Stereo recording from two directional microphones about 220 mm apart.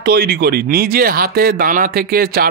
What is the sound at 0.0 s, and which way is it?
Speech, 45° right (ahead or behind).